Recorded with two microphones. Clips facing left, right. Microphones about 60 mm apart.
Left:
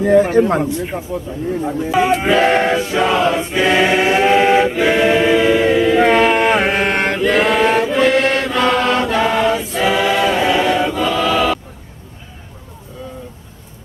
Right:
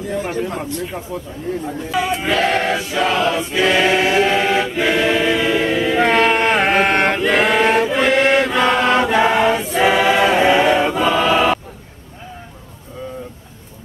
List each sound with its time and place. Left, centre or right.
0.2 s speech: left
0.6 s a man's voice: centre
1.6 s choir: centre
10.3 s choir: right